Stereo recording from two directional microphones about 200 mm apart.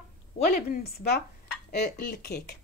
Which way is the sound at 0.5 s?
50° left (ahead or behind).